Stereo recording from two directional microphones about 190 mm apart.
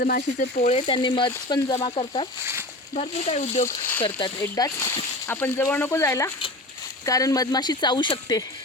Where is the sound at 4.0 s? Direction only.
25° left (ahead or behind).